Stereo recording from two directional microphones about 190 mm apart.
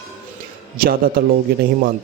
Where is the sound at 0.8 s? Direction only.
50° right (ahead or behind).